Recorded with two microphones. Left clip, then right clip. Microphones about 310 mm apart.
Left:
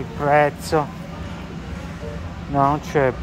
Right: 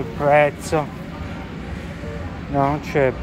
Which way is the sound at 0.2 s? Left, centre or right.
Centre.